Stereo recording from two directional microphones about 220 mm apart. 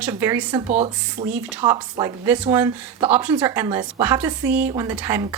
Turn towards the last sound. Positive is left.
turn(degrees=-10)  # may be behind; listen again after turning